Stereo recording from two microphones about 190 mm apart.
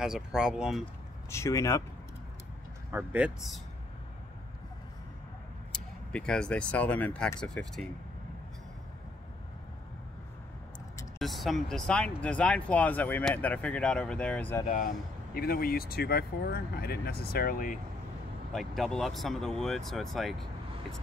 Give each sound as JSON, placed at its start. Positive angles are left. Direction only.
{"t": 0.0, "sound": "speech", "side_deg": -5}
{"t": 1.3, "sound": "speech", "side_deg": 15}
{"t": 2.9, "sound": "speech", "side_deg": -10}
{"t": 5.7, "sound": "speech", "side_deg": 5}
{"t": 11.1, "sound": "speech", "side_deg": 0}
{"t": 14.7, "sound": "speech", "side_deg": 45}
{"t": 18.5, "sound": "speech", "side_deg": 0}